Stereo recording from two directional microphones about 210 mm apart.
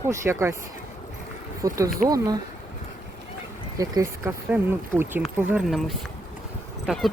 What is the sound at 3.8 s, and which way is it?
Speech, 15° right (ahead or behind).